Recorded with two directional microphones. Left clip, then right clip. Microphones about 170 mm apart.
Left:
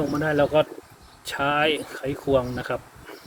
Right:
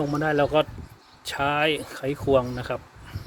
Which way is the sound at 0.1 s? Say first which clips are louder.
Left 1 dB; 45° right (ahead or behind).